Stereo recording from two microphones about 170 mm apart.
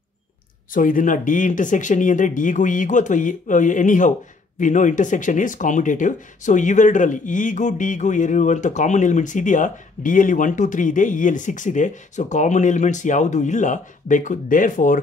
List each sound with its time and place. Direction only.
0.7 s speech: 50° left (ahead or behind)